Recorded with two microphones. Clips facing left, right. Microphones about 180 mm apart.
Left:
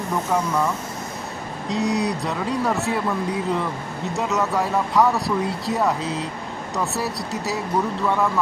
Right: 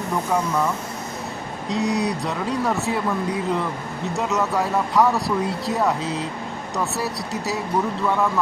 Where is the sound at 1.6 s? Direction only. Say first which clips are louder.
Even; centre (ahead or behind).